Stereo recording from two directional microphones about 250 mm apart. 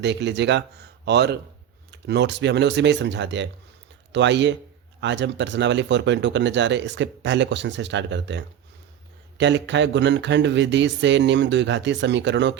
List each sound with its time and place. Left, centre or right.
0.0 s speech: right